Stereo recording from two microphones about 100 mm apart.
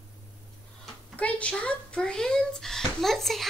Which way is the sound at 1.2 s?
10° left (ahead or behind).